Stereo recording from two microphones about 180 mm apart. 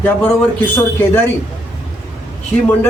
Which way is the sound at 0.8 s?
10° left (ahead or behind).